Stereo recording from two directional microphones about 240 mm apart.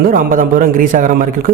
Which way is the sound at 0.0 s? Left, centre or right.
Right.